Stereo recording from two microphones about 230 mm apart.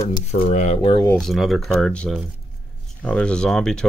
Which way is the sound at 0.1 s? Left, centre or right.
Left.